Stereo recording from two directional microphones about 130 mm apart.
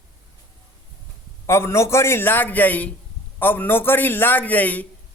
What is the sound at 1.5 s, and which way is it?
A man's voice, 20° left (ahead or behind).